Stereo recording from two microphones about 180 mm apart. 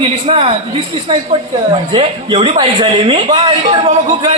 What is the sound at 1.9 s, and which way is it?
A man's voice, 30° right (ahead or behind).